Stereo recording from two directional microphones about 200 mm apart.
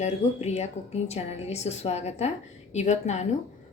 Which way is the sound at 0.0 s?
35° left (ahead or behind).